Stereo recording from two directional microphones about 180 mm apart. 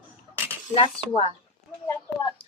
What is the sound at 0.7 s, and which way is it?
Speech, 30° left (ahead or behind).